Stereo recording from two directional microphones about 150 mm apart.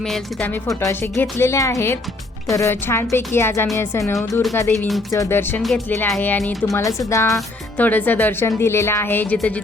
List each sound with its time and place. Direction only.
0.0 s speech: 5° left (ahead or behind)
0.5 s a woman's voice: 20° left (ahead or behind); by 6.7 s centre (ahead or behind)
7.1 s a woman's voice: 20° left (ahead or behind)